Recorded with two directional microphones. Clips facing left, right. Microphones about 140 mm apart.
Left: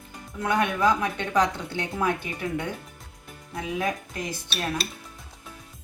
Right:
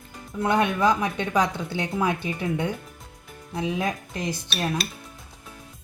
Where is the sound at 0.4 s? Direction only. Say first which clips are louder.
Right 2 dB; 20° right (ahead or behind).